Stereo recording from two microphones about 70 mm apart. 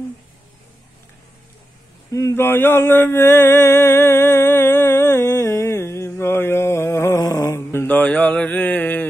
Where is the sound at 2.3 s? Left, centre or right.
Left.